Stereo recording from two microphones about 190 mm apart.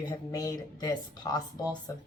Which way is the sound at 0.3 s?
20° left (ahead or behind).